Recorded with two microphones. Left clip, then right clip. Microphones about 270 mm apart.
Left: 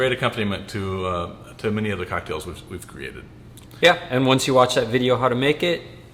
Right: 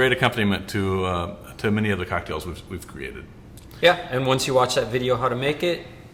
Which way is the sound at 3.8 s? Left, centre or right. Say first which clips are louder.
Left 2 dB; left.